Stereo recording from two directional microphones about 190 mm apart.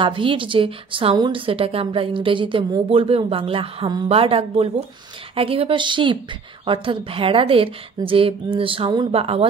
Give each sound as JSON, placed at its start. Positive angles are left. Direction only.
{"t": 0.0, "sound": "a woman's voice", "side_deg": -25}